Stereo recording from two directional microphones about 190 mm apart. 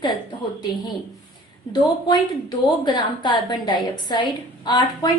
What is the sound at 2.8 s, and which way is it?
A woman's voice, 25° left (ahead or behind).